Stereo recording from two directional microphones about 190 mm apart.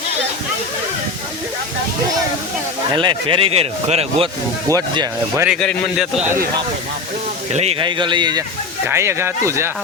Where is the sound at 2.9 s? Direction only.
25° right (ahead or behind).